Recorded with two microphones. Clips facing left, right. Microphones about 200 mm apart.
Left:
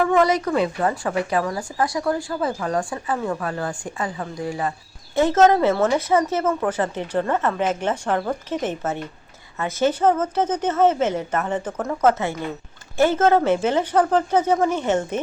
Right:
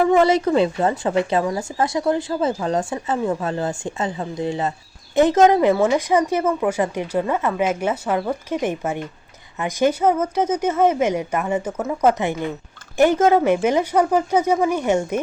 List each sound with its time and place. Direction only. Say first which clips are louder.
0.2 s a woman's voice: right 3 dB; 25° right (ahead or behind); by 15.2 s 10° right (ahead or behind)